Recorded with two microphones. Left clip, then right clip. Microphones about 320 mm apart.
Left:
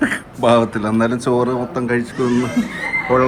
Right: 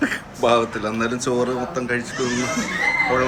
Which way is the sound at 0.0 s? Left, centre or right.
Left.